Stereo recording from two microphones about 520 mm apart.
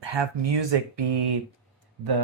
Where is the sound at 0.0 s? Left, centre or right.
Right.